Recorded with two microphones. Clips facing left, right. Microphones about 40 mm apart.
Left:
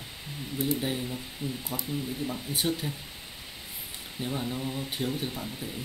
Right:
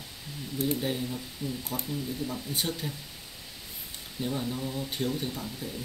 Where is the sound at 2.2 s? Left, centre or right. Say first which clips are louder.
Left 2 dB; centre.